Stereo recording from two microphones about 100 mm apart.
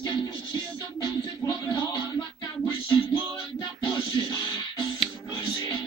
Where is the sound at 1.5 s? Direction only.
40° left (ahead or behind).